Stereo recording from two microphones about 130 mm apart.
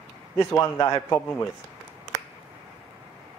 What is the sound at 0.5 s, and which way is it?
Speech, 20° left (ahead or behind).